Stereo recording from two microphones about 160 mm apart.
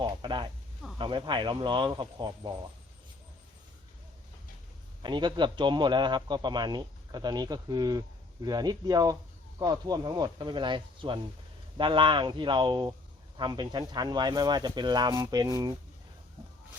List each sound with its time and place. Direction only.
0.0 s a sound: 30° right (ahead or behind)
0.9 s a man's voice: 30° right (ahead or behind)
5.0 s a man's voice: 30° right (ahead or behind)